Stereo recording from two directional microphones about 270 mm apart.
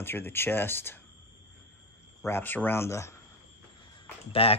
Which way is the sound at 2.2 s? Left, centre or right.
Centre.